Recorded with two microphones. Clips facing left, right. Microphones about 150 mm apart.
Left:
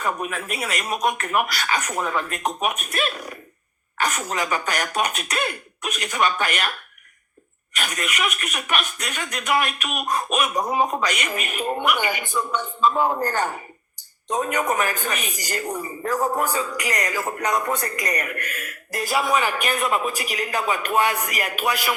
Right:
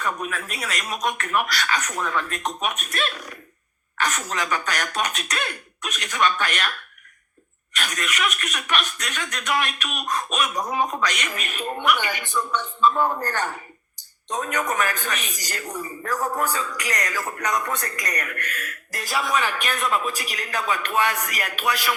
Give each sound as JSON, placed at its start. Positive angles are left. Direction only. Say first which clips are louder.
{"t": 0.3, "sound": "a man's voice", "louder": "left 3 dB", "side_deg": 5}
{"t": 7.8, "sound": "a man's voice", "louder": "left 1 dB", "side_deg": 5}
{"t": 13.1, "sound": "a man's voice", "louder": "left 3 dB", "side_deg": 25}
{"t": 14.3, "sound": "a man's voice", "louder": "left 3 dB", "side_deg": 5}
{"t": 15.8, "sound": "a man's voice", "louder": "left 2 dB", "side_deg": 25}
{"t": 16.4, "sound": "a man's voice", "louder": "left 2 dB", "side_deg": 10}